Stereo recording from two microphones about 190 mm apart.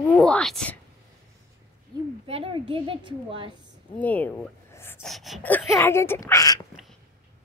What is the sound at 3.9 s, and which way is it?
Speech, 10° left (ahead or behind).